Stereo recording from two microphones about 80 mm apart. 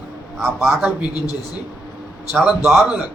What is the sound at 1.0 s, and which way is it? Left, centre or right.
Speech, left.